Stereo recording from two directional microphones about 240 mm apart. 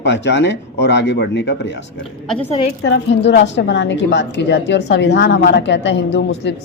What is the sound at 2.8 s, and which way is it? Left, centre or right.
A man's voice, left.